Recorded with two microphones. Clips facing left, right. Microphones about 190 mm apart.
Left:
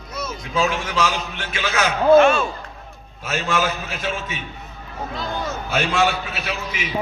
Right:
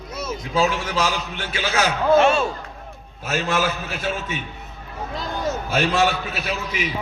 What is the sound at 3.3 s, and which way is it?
Speech, 40° right (ahead or behind).